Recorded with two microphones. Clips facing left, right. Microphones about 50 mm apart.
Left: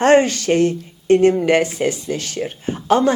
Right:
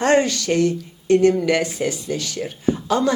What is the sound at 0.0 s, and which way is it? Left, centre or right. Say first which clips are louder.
Speech: left 4 dB; left.